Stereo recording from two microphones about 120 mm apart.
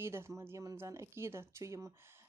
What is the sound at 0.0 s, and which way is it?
Speech, 20° right (ahead or behind).